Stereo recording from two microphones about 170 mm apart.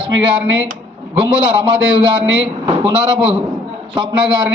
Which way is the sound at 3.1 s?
30° right (ahead or behind).